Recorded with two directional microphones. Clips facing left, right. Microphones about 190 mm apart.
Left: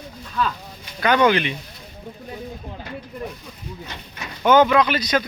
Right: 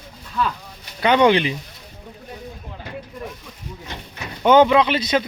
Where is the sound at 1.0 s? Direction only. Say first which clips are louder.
Right 2 dB; 25° right (ahead or behind).